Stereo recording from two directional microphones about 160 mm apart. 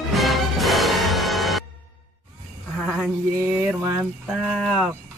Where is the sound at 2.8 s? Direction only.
Centre (ahead or behind); by 4.0 s 15° right (ahead or behind).